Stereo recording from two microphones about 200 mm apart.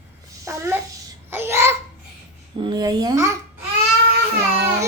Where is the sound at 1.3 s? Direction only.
10° right (ahead or behind).